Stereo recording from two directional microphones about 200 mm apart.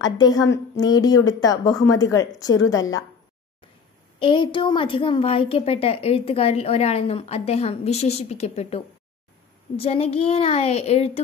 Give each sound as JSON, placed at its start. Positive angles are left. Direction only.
{"t": 0.2, "sound": "a woman's voice", "side_deg": 20}
{"t": 4.2, "sound": "a woman's voice", "side_deg": 25}